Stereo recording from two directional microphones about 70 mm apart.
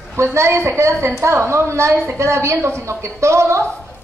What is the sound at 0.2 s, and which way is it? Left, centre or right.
A woman's voice, right.